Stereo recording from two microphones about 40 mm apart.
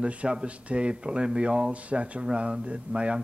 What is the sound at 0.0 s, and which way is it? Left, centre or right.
Speech, right.